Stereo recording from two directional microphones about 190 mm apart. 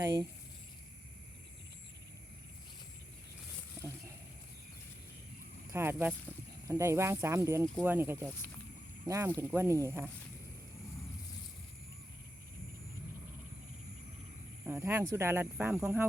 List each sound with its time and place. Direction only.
0.0 s speech: 20° right (ahead or behind)
3.8 s a sound: 15° right (ahead or behind)
5.7 s speech: 10° right (ahead or behind)
14.7 s speech: 15° right (ahead or behind)